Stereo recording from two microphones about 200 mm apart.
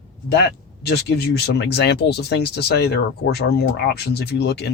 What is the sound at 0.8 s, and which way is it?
Speech, 55° left (ahead or behind).